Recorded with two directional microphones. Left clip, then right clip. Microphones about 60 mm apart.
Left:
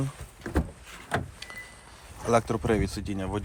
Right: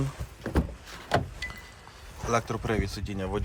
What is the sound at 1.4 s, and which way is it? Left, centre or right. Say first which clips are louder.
Vehicle: right 3 dB; right.